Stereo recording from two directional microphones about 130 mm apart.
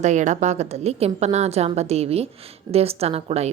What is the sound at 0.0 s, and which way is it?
A woman's voice, 70° right (ahead or behind).